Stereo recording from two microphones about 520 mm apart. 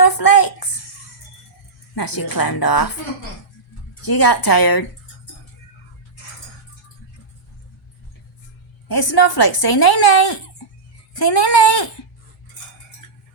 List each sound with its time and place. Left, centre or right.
0.0 s a woman's voice: left
2.0 s a woman's voice: left
4.0 s a woman's voice: left
9.0 s a woman's voice: left
13.0 s cutlery: left